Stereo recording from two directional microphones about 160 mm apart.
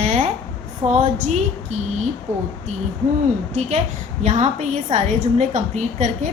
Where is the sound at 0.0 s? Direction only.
45° right (ahead or behind).